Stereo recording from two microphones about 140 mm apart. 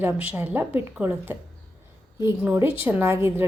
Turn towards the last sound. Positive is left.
turn(degrees=-15)  # may be behind; listen again after turning